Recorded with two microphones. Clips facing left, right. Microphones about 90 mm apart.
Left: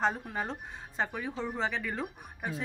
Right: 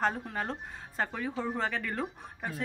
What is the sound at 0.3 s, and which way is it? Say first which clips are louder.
Speech: even; 15° left (ahead or behind).